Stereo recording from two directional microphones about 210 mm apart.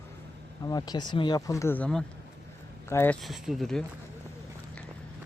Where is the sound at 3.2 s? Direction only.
Centre (ahead or behind).